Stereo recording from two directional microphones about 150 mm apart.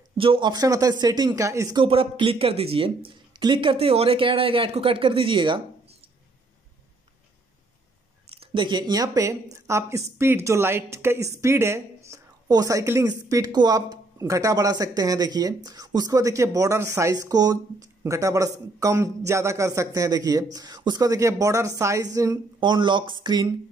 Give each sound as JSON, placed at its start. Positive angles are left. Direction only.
{"t": 0.2, "sound": "speech", "side_deg": -35}
{"t": 1.8, "sound": "speech", "side_deg": -35}
{"t": 8.3, "sound": "speech", "side_deg": -35}